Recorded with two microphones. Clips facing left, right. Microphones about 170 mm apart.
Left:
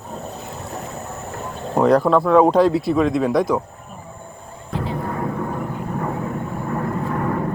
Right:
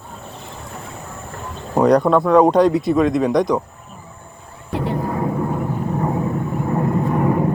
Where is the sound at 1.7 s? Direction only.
Centre (ahead or behind).